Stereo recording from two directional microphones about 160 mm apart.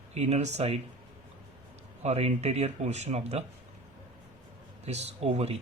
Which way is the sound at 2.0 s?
40° right (ahead or behind).